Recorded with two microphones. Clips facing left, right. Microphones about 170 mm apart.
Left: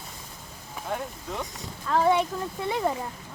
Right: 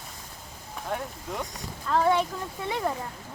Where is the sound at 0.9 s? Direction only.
Centre (ahead or behind).